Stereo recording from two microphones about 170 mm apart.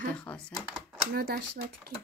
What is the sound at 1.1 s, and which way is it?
Speech, 65° right (ahead or behind).